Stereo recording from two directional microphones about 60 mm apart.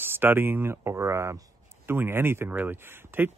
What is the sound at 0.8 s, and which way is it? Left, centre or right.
Speech, right.